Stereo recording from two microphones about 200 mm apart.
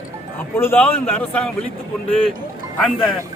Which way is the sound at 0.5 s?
10° left (ahead or behind).